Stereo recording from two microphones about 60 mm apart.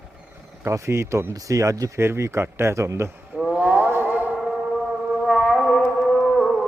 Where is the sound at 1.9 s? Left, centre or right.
Right.